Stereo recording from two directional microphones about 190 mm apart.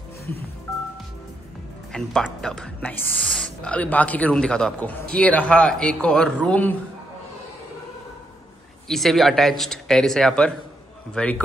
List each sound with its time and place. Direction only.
1.9 s speech: centre (ahead or behind)
8.8 s speech: centre (ahead or behind)